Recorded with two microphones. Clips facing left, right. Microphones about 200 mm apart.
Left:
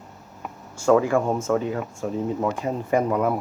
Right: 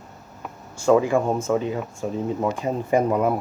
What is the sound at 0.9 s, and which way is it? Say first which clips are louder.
Speech: right 1 dB; 20° right (ahead or behind).